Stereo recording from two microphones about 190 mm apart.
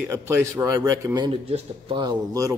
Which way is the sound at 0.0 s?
10° right (ahead or behind).